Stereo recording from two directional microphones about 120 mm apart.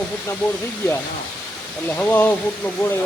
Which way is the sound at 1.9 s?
15° left (ahead or behind).